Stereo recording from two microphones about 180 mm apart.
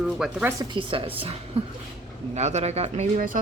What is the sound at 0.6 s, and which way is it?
A woman's voice, 25° right (ahead or behind).